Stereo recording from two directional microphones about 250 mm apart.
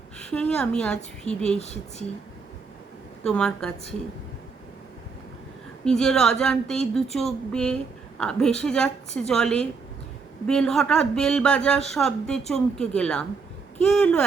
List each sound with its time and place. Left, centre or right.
0.2 s a woman's voice: centre
1.5 s speech: left
3.2 s speech: centre
5.8 s speech: centre